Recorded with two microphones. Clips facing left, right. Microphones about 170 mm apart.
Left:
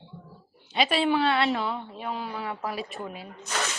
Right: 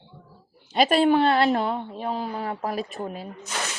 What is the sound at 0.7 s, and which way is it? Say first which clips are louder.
A woman's voice: right 5 dB; 45° right (ahead or behind).